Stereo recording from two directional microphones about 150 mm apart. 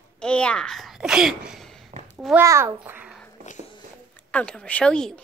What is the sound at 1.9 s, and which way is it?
Babbling, 45° right (ahead or behind).